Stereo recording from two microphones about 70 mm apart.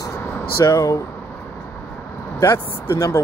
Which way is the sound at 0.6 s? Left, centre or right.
Left.